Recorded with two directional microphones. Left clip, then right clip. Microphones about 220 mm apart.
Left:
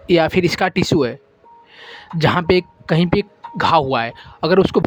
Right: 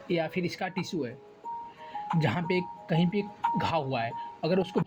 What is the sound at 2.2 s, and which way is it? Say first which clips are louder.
Speech: left 16 dB; 45° left (ahead or behind).